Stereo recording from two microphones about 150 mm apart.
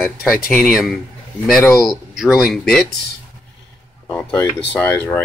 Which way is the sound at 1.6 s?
20° left (ahead or behind).